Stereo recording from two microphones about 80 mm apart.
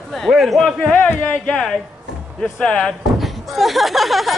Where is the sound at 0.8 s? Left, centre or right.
Centre.